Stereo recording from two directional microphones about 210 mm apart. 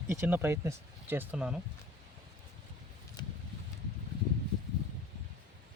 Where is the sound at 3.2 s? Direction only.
20° left (ahead or behind).